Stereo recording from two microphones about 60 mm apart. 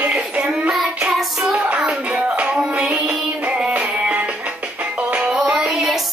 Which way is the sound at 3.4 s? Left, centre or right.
Right.